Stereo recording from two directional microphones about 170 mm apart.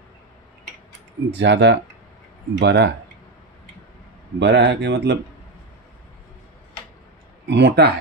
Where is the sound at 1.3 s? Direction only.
90° right.